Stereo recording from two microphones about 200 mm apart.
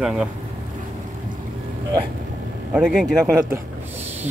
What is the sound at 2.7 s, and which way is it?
Speech, 5° right (ahead or behind).